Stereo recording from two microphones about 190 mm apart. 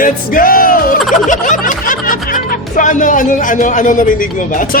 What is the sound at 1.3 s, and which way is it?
Speech, 40° left (ahead or behind).